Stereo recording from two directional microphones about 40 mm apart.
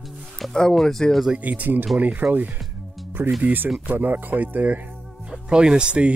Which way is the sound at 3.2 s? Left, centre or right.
Right.